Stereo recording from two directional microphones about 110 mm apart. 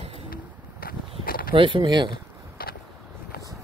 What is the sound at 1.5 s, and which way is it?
Speech, 50° right (ahead or behind).